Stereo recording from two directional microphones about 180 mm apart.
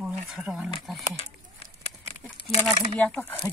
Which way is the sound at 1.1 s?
35° left (ahead or behind).